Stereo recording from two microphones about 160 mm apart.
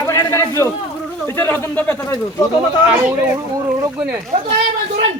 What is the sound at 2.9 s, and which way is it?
Speech, 15° right (ahead or behind).